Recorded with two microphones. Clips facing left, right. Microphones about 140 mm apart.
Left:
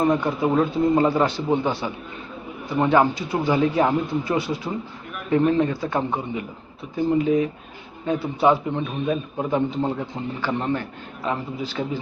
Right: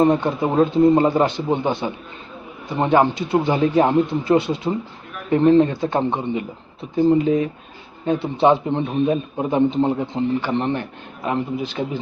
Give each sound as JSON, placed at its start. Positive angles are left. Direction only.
{"t": 0.0, "sound": "a man's voice", "side_deg": -25}
{"t": 8.0, "sound": "a man's voice", "side_deg": -25}